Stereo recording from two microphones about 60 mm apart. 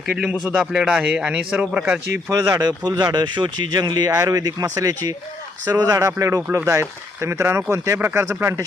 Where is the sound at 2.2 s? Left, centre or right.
Right.